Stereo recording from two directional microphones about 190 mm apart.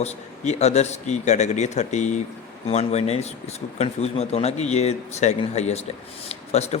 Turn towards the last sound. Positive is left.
turn(degrees=35)  # may be behind; listen again after turning